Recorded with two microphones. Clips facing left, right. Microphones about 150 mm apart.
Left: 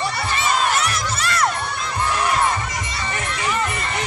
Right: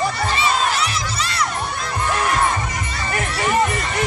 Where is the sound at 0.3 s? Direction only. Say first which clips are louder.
Left 2 dB; 50° left (ahead or behind).